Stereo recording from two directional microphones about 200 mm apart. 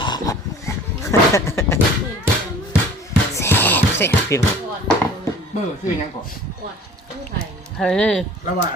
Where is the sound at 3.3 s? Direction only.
10° left (ahead or behind).